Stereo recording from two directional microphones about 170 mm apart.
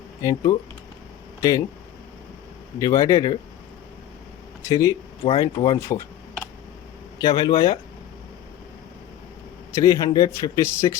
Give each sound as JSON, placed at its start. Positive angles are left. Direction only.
{"t": 0.2, "sound": "a man's voice", "side_deg": 20}
{"t": 2.7, "sound": "a man's voice", "side_deg": 20}
{"t": 4.6, "sound": "a man's voice", "side_deg": 20}
{"t": 5.2, "sound": "a man's voice", "side_deg": 30}
{"t": 7.2, "sound": "a man's voice", "side_deg": 25}
{"t": 9.7, "sound": "a man's voice", "side_deg": 20}